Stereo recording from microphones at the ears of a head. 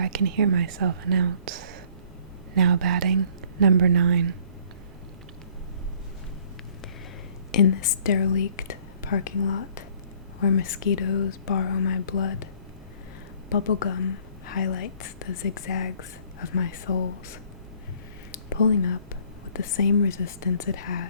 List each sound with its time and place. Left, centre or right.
0.0 s speech: right
7.5 s a woman's voice: left
13.5 s a woman's voice: left
18.3 s a sound: left
20.2 s a woman's voice: left